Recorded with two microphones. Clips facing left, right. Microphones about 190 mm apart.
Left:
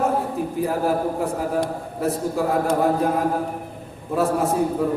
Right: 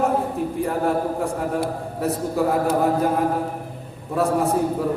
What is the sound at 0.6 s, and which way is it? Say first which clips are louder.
A woman's voice: left 1 dB; centre (ahead or behind).